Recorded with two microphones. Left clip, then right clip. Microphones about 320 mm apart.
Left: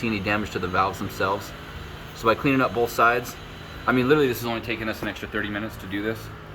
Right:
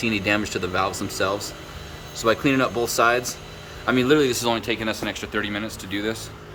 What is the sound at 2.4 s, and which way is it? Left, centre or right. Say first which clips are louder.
Speech: even; centre.